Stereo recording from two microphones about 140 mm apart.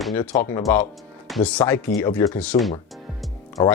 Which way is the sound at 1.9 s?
90° left.